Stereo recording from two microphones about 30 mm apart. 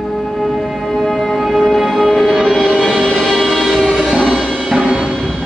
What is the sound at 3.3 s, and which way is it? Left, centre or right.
Music, centre.